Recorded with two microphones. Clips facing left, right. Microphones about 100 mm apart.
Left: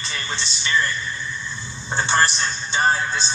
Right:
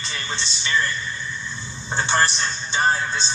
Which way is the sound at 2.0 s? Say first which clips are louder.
Left 1 dB; 25° right (ahead or behind).